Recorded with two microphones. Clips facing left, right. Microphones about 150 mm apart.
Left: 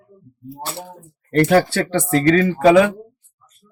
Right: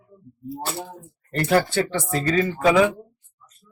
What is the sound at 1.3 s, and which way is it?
Speech, 70° left (ahead or behind).